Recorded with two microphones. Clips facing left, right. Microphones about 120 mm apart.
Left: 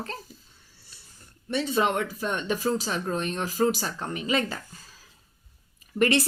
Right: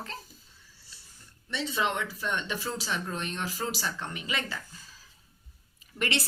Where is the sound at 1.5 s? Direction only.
50° left (ahead or behind).